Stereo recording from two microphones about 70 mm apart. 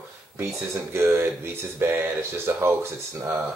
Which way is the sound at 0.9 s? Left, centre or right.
Right.